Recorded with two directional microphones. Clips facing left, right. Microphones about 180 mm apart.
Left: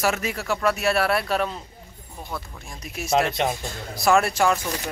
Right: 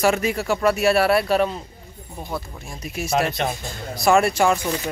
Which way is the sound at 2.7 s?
Centre (ahead or behind).